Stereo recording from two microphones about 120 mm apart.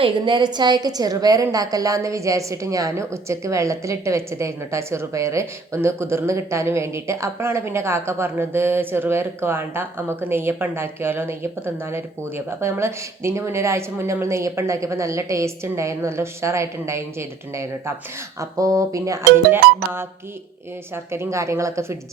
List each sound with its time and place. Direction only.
0.0 s a woman's voice: 45° right (ahead or behind); by 21.9 s 25° right (ahead or behind)